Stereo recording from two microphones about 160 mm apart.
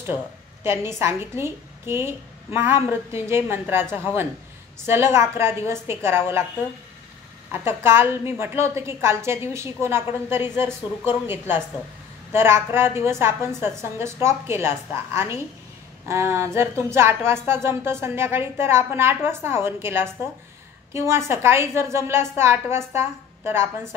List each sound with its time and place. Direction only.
0.7 s a woman's voice: 15° right (ahead or behind)
7.5 s a woman's voice: 15° right (ahead or behind)